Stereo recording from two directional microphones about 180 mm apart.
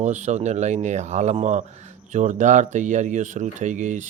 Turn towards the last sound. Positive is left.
turn(degrees=-40)  # may be behind; listen again after turning